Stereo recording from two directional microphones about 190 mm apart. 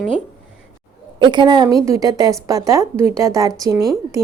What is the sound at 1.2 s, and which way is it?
A woman's voice, 25° right (ahead or behind).